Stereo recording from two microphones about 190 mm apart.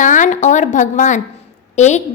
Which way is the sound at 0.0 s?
40° left (ahead or behind).